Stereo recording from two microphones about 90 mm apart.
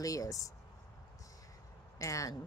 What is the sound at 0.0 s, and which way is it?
Speech, 40° left (ahead or behind).